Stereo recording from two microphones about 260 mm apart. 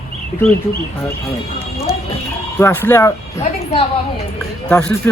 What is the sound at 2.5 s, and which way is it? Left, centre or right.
Speech, centre.